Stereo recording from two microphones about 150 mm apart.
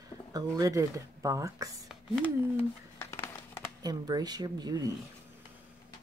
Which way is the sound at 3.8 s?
25° right (ahead or behind).